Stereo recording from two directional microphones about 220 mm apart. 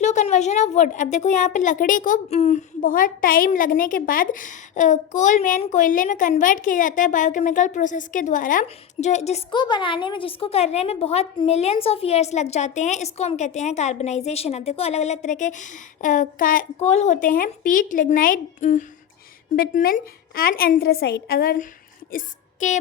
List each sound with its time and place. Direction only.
0.0 s a woman's voice: 30° left (ahead or behind)